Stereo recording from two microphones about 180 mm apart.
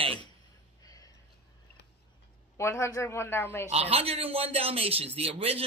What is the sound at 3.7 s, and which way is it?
A man's voice, 35° right (ahead or behind).